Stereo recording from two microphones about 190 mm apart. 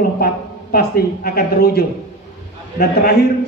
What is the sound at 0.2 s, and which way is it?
A man's voice, 55° left (ahead or behind).